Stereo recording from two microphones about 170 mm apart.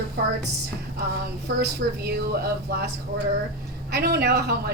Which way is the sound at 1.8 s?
75° right (ahead or behind).